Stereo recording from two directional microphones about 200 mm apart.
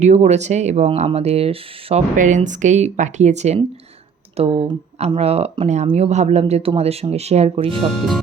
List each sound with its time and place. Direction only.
0.0 s speech: 35° right (ahead or behind)
7.9 s speech: centre (ahead or behind)